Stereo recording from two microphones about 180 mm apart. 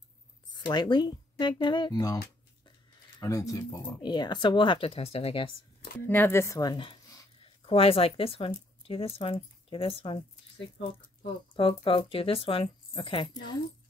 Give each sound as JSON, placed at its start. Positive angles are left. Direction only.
{"t": 0.7, "sound": "speech", "side_deg": 25}
{"t": 3.2, "sound": "speech", "side_deg": 20}
{"t": 6.0, "sound": "a sound", "side_deg": 10}
{"t": 7.7, "sound": "speech", "side_deg": 30}
{"t": 11.5, "sound": "speech", "side_deg": 30}